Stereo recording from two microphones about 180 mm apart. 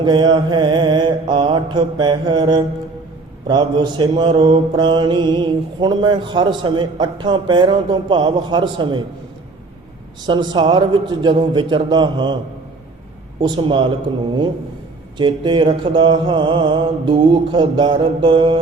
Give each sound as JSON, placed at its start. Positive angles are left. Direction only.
{"t": 0.0, "sound": "mantra", "side_deg": -25}
{"t": 10.2, "sound": "mantra", "side_deg": -25}
{"t": 13.4, "sound": "mantra", "side_deg": -25}
{"t": 15.2, "sound": "mantra", "side_deg": -25}